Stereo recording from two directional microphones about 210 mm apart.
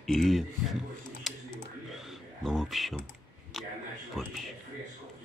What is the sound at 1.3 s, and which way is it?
Typing, centre (ahead or behind).